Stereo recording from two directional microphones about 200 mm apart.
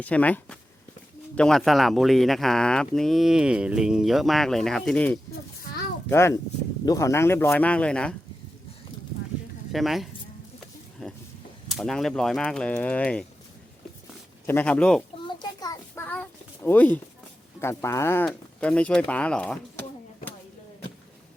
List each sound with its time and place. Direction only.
0.0 s speech: 5° left (ahead or behind)
9.7 s speech: centre (ahead or behind)
14.4 s speech: 10° left (ahead or behind)
15.4 s a sound: 20° left (ahead or behind)
16.6 s speech: 10° left (ahead or behind)